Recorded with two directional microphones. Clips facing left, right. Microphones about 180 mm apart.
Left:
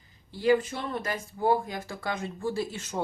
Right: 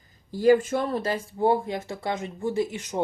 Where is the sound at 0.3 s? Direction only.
45° right (ahead or behind).